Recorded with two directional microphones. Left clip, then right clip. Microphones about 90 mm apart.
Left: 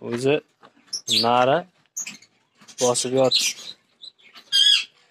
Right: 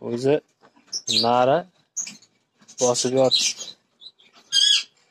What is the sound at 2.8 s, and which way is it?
Speech, 20° right (ahead or behind).